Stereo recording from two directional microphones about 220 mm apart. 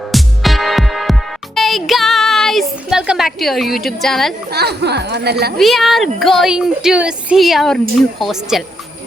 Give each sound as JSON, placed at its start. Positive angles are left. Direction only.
{"t": 0.1, "sound": "music", "side_deg": 0}
{"t": 3.8, "sound": "speech", "side_deg": 0}
{"t": 4.5, "sound": "speech", "side_deg": -50}
{"t": 5.5, "sound": "speech", "side_deg": 0}